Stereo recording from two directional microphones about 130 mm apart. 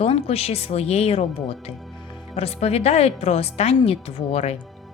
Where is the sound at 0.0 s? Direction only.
50° left (ahead or behind).